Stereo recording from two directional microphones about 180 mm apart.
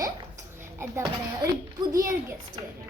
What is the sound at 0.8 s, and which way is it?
A child's voice, 20° right (ahead or behind).